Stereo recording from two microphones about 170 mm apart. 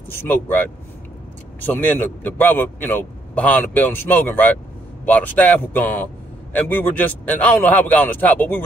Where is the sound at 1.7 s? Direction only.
10° left (ahead or behind).